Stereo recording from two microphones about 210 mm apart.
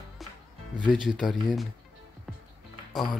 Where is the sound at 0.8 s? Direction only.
Centre (ahead or behind).